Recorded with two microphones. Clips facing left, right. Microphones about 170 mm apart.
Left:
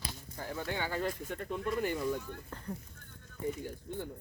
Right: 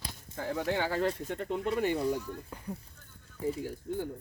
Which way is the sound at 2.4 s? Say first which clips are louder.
Right 2 dB; 10° right (ahead or behind).